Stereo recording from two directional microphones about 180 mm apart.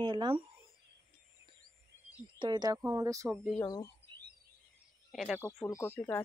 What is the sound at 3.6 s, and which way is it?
Speech, 20° left (ahead or behind).